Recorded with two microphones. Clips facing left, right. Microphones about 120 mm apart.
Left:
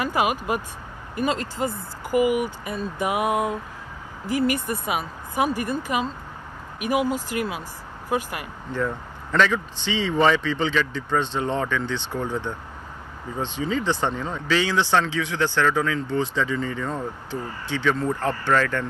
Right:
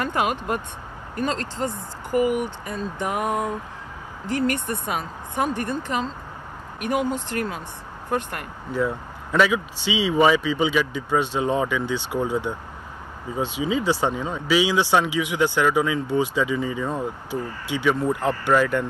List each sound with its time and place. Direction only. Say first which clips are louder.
0.0 s speech: left 1 dB; 5° left (ahead or behind)
8.7 s speech: right 2 dB; 10° right (ahead or behind)